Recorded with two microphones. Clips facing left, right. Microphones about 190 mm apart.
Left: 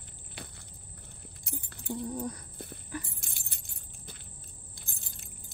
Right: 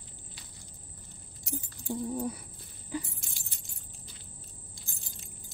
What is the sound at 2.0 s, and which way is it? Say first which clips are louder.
Speech: right 3 dB; 5° right (ahead or behind).